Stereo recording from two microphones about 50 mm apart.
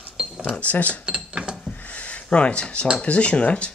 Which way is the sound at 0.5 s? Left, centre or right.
Left.